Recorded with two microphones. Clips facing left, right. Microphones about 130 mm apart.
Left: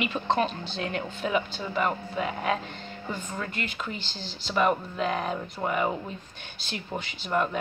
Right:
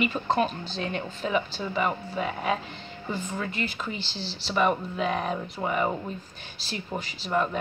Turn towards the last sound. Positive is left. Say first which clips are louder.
# even
turn(degrees=0)  # may be behind; listen again after turning